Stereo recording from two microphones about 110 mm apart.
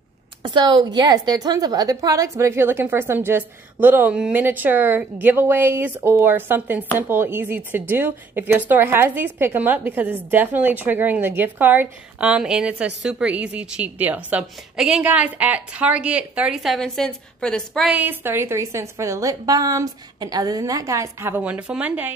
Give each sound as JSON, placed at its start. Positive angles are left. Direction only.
{"t": 0.4, "sound": "a woman's voice", "side_deg": -45}
{"t": 17.8, "sound": "a woman's voice", "side_deg": -15}